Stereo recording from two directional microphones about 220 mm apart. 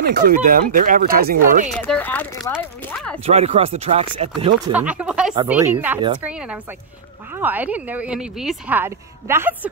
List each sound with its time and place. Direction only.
0.0 s speech: 40° right (ahead or behind)
1.7 s speech: 5° left (ahead or behind)
3.3 s speech: 30° right (ahead or behind)
4.7 s speech: 5° right (ahead or behind)